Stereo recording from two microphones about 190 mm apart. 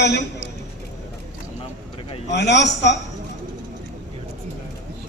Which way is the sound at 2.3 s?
65° left (ahead or behind).